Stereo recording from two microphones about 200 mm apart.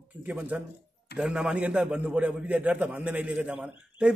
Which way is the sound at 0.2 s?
10° right (ahead or behind).